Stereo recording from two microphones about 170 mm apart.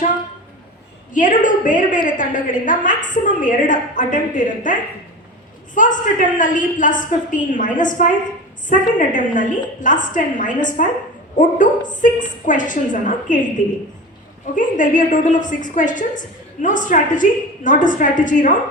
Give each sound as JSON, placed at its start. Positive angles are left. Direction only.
{"t": 1.1, "sound": "a woman's voice", "side_deg": 50}
{"t": 14.5, "sound": "a woman's voice", "side_deg": 50}